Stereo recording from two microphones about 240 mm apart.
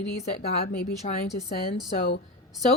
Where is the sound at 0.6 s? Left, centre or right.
Left.